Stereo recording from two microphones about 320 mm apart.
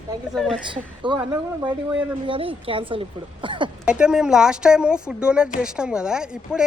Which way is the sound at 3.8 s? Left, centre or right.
Centre.